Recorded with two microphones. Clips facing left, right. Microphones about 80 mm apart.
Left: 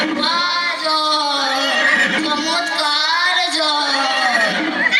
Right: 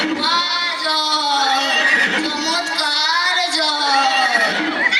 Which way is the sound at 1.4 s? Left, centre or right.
Left.